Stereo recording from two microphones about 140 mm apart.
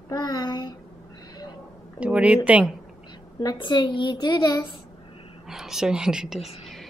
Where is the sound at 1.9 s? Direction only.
10° right (ahead or behind).